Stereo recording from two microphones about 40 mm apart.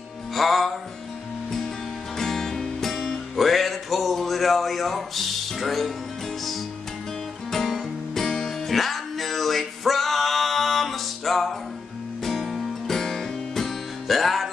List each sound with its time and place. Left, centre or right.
0.3 s music: centre
2.1 s music: centre
7.5 s music: centre